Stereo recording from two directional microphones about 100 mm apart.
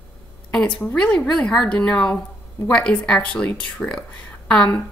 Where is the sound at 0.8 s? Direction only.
10° left (ahead or behind).